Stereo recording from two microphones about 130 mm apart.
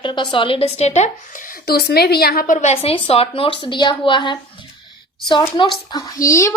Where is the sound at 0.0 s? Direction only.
40° left (ahead or behind); by 1.1 s 60° left (ahead or behind).